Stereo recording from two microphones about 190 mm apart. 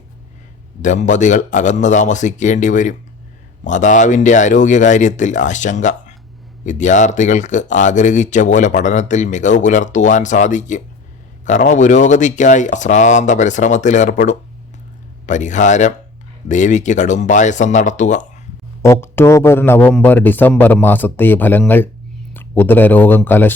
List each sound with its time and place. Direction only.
0.8 s speech: 40° left (ahead or behind)
18.8 s speech: 15° left (ahead or behind)